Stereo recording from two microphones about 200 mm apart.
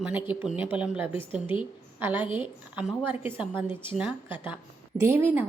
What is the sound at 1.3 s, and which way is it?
Speech, 25° left (ahead or behind).